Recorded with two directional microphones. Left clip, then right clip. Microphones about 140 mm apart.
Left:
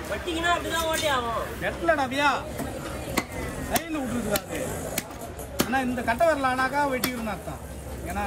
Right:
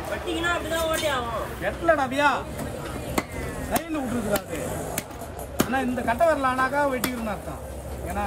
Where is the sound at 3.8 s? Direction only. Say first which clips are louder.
Right 1 dB; 20° right (ahead or behind).